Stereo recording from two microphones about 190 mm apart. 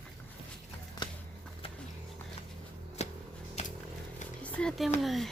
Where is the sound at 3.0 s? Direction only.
35° left (ahead or behind).